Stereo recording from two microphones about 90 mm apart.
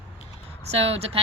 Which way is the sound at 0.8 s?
90° right.